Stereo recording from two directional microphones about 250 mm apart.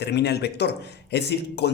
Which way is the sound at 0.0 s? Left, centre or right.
Left.